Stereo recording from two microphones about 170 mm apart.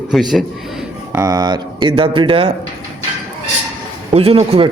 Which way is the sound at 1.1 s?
20° right (ahead or behind).